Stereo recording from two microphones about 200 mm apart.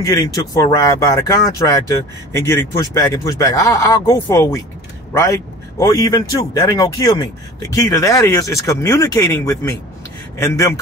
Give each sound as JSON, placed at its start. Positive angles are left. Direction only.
{"t": 0.0, "sound": "speech", "side_deg": 15}
{"t": 5.8, "sound": "speech", "side_deg": 15}